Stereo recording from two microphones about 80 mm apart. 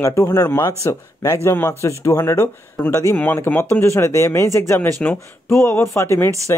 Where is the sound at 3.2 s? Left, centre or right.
Left.